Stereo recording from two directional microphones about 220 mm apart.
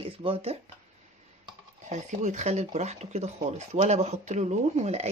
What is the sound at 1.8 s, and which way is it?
Speech, 30° right (ahead or behind).